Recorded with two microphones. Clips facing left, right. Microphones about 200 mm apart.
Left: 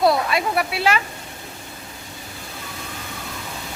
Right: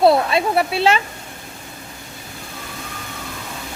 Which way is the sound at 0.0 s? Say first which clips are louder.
Right 4 dB; 25° right (ahead or behind).